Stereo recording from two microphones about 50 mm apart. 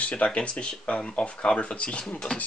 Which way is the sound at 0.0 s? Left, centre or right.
Left.